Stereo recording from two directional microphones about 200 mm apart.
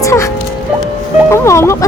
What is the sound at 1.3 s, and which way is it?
Speech, 15° left (ahead or behind).